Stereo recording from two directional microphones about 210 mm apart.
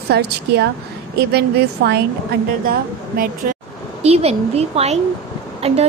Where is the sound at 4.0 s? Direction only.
30° right (ahead or behind).